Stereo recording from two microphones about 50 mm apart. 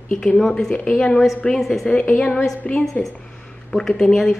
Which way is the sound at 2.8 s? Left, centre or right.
Centre.